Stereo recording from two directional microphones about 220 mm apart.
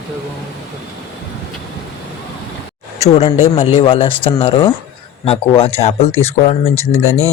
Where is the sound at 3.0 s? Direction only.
30° left (ahead or behind).